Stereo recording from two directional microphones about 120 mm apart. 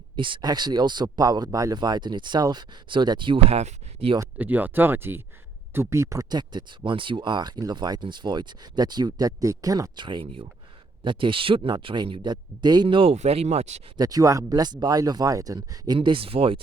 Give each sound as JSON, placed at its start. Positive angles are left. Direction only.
{"t": 0.2, "sound": "speech", "side_deg": -40}
{"t": 3.5, "sound": "speech", "side_deg": -60}
{"t": 4.4, "sound": "speech", "side_deg": -15}
{"t": 6.2, "sound": "speech", "side_deg": -35}
{"t": 13.1, "sound": "speech", "side_deg": -60}
{"t": 13.9, "sound": "speech", "side_deg": -30}
{"t": 16.0, "sound": "speech", "side_deg": -50}